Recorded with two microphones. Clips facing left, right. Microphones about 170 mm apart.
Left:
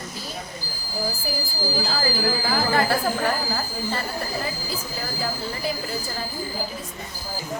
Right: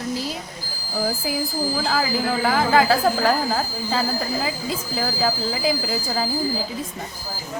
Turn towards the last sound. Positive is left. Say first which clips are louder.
# right 5 dB
turn(degrees=-90)